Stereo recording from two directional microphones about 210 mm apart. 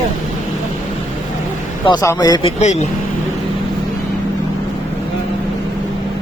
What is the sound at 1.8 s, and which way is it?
Speech, 20° left (ahead or behind).